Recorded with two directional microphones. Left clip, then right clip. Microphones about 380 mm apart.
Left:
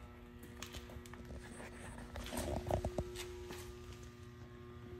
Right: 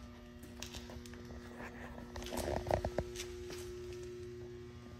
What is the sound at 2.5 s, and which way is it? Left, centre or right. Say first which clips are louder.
Horse: right 5 dB; left.